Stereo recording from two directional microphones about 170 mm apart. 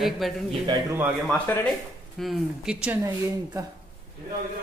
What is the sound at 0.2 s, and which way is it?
A woman's voice, centre (ahead or behind).